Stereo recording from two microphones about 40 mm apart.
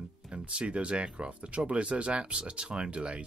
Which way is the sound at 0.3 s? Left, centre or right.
Right.